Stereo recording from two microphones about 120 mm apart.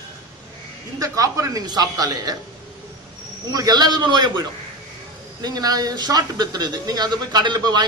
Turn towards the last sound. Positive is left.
turn(degrees=-35)  # may be behind; listen again after turning